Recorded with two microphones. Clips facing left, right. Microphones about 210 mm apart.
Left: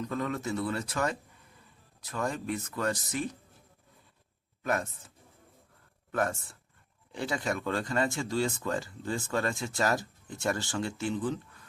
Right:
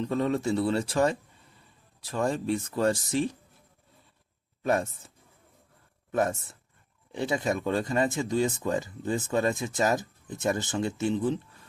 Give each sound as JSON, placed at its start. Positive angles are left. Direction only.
{"t": 0.0, "sound": "speech", "side_deg": -30}
{"t": 4.6, "sound": "speech", "side_deg": -25}